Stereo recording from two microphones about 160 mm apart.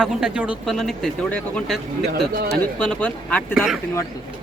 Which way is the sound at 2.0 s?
75° right (ahead or behind).